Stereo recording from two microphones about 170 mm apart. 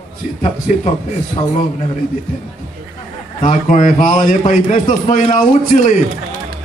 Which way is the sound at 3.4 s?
45° left (ahead or behind).